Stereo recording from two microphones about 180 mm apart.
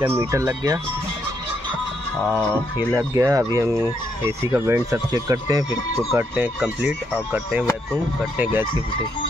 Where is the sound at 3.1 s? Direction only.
15° right (ahead or behind).